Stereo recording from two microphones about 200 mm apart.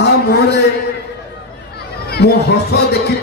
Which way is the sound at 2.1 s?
55° left (ahead or behind).